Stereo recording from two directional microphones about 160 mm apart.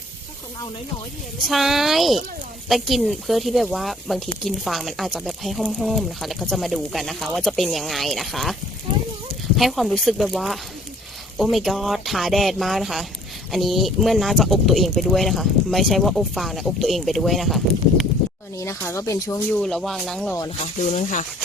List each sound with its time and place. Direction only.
1.5 s speech: centre (ahead or behind)
9.6 s speech: centre (ahead or behind)
18.5 s speech: 15° left (ahead or behind)
19.5 s speech: 5° left (ahead or behind)
20.9 s speech: 50° left (ahead or behind)